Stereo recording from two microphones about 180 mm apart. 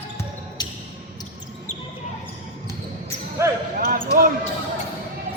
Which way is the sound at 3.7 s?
50° right (ahead or behind).